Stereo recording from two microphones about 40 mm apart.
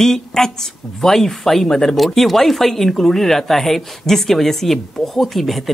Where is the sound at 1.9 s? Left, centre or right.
Centre.